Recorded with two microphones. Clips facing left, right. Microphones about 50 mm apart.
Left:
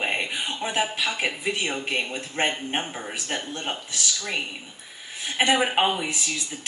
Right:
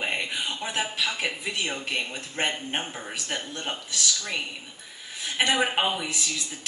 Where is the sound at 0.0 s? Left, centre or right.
Left.